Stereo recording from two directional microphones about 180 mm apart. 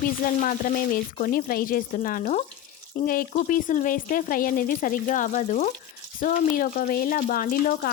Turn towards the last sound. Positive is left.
turn(degrees=50)  # may be behind; listen again after turning